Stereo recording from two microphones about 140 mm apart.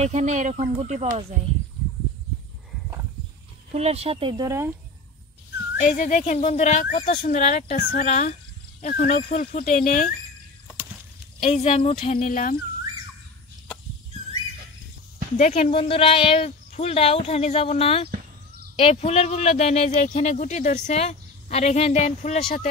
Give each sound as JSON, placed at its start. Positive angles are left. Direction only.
{"t": 0.0, "sound": "speech", "side_deg": -55}
{"t": 3.7, "sound": "speech", "side_deg": -50}
{"t": 4.5, "sound": "speech", "side_deg": -15}
{"t": 5.8, "sound": "speech", "side_deg": 70}
{"t": 8.8, "sound": "speech", "side_deg": 70}
{"t": 11.4, "sound": "speech", "side_deg": 45}
{"t": 15.3, "sound": "speech", "side_deg": 55}
{"t": 15.7, "sound": "speech", "side_deg": 40}